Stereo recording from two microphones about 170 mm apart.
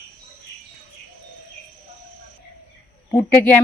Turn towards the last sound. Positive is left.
turn(degrees=10)  # may be behind; listen again after turning